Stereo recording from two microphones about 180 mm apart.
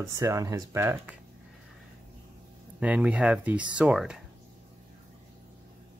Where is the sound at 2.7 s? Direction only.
5° right (ahead or behind).